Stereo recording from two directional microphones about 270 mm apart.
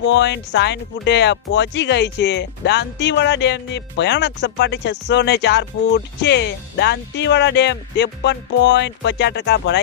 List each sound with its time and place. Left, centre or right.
0.1 s speech: left